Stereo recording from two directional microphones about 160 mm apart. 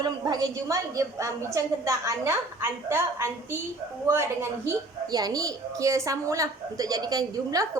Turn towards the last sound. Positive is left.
turn(degrees=-25)  # may be behind; listen again after turning